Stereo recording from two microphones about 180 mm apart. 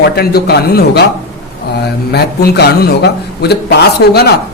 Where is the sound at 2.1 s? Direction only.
65° left (ahead or behind).